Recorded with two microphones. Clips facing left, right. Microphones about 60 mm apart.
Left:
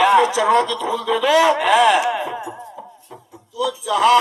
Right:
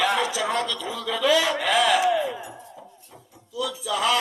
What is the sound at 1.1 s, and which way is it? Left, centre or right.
A man's voice, left.